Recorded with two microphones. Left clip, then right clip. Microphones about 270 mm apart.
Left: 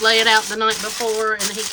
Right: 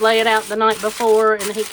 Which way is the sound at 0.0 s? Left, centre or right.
Centre.